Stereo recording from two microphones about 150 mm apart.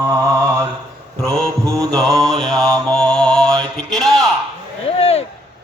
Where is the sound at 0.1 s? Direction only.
15° right (ahead or behind).